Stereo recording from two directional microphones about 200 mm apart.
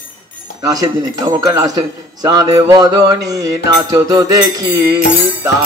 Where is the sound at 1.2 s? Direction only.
20° right (ahead or behind).